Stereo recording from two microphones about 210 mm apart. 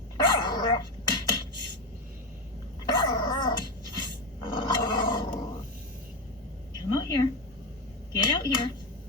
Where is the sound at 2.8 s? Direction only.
20° left (ahead or behind).